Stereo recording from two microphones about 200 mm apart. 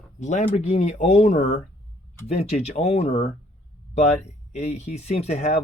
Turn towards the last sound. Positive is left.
turn(degrees=35)  # may be behind; listen again after turning